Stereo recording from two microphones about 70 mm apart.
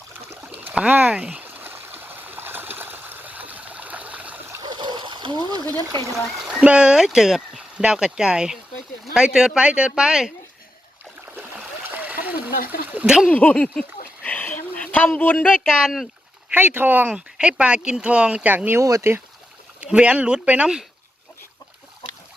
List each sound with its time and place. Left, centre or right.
0.4 s stream: centre
4.6 s splash: right
6.5 s speech: centre
11.3 s stream: right
13.1 s speech: centre
13.3 s speech: centre
14.3 s a sound: left
16.5 s speech: right
17.1 s speech: centre
18.5 s speech: right
18.8 s speech: right
19.8 s speech: centre